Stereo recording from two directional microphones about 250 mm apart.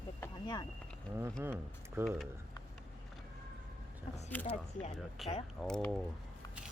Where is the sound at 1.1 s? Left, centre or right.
Centre.